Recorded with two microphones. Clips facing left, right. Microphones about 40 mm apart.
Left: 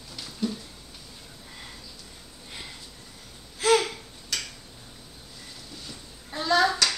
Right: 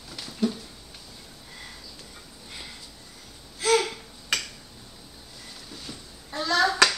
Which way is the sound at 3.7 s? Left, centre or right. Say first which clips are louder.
Right 3 dB; centre.